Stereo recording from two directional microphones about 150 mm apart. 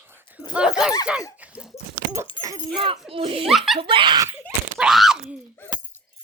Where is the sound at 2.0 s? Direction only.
90° right.